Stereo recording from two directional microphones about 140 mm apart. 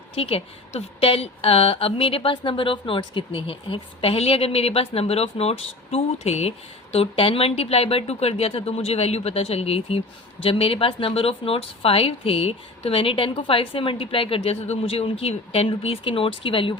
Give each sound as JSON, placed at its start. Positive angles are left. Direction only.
{"t": 0.2, "sound": "a woman's voice", "side_deg": 45}